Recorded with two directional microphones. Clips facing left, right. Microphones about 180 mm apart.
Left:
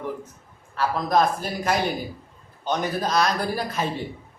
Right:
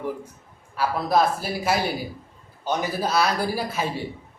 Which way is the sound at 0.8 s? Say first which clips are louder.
Even; 10° right (ahead or behind).